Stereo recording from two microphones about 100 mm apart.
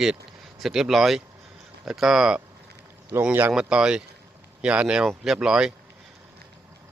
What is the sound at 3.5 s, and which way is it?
Speech, 10° right (ahead or behind).